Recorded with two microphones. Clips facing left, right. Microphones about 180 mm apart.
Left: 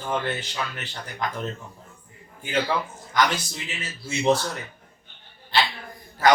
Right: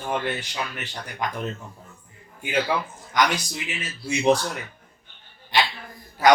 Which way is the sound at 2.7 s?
10° right (ahead or behind).